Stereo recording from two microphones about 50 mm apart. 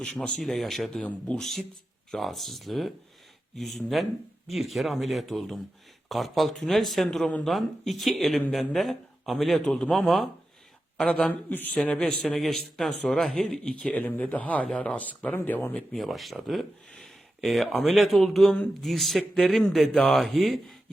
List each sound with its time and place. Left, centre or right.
0.2 s speech: centre
9.6 s speech: centre
9.9 s speech: centre
10.9 s a man's voice: left
11.8 s speech: centre
12.2 s speech: centre
13.9 s a man's voice: left
15.9 s speech: centre